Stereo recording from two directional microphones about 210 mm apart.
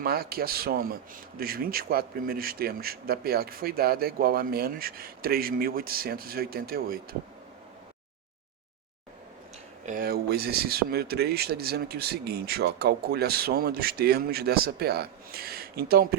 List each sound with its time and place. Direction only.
0.0 s a man's voice: 45° right (ahead or behind)
9.8 s a man's voice: 40° right (ahead or behind)